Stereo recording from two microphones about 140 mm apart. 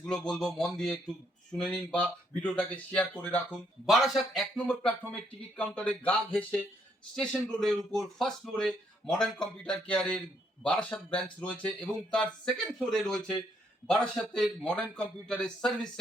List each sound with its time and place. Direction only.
0.0 s a man's voice: 5° left (ahead or behind)
3.8 s a man's voice: centre (ahead or behind)